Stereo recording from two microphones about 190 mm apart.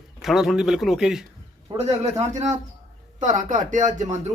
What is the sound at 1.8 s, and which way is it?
Speech, 35° right (ahead or behind).